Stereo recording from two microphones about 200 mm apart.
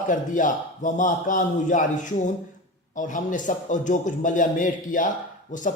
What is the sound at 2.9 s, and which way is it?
A man's voice, 40° left (ahead or behind).